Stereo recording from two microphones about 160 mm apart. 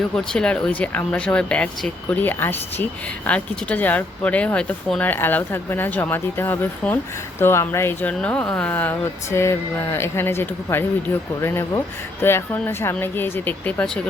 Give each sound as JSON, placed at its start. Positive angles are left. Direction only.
{"t": 0.3, "sound": "speech", "side_deg": 5}